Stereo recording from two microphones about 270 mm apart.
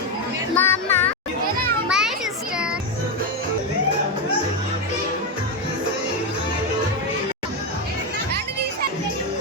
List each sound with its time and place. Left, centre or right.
0.5 s music: centre
1.9 s children playing: centre